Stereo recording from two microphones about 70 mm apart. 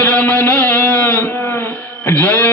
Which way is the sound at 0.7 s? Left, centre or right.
Left.